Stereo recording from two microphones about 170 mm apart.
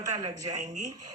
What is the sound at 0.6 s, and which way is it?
Speech, 45° right (ahead or behind).